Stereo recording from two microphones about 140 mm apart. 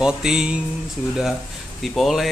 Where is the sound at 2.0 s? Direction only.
Centre (ahead or behind).